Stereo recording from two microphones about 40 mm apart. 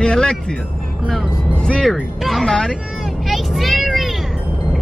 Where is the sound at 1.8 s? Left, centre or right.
Centre.